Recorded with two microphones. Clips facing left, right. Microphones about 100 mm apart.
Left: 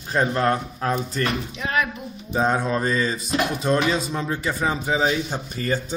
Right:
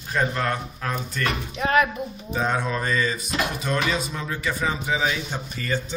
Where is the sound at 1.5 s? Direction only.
45° right (ahead or behind).